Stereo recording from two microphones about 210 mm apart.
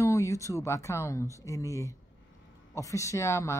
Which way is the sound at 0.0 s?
15° left (ahead or behind).